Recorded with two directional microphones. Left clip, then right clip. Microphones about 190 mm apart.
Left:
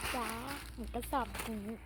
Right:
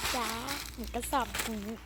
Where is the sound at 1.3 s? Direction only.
25° right (ahead or behind).